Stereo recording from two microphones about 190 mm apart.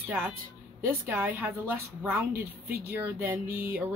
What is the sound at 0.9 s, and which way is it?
A woman's voice, 10° right (ahead or behind).